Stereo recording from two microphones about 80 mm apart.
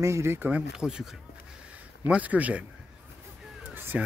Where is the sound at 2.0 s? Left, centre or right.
Centre.